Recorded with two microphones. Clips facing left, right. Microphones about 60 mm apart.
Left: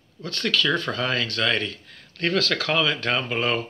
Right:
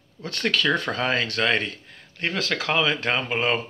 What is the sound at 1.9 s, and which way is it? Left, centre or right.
Speech, centre.